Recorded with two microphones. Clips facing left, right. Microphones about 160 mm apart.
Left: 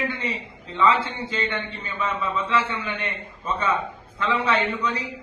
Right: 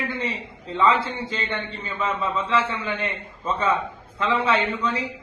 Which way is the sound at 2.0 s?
30° right (ahead or behind).